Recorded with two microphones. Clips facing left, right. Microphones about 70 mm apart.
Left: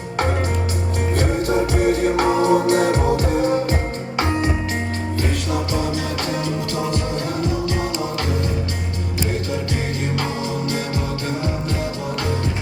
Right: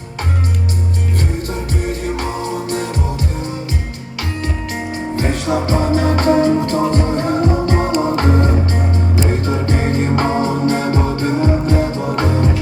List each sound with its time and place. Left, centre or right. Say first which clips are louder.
1.8 s music: left 4 dB; left
5.1 s music: right 6 dB; right